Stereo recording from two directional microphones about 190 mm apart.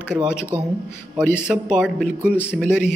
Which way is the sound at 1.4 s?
5° right (ahead or behind).